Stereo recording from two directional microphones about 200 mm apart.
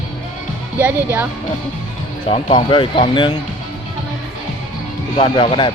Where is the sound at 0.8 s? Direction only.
10° right (ahead or behind).